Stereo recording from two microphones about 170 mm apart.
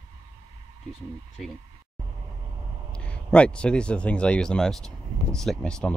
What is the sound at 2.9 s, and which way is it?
Speech, 5° left (ahead or behind).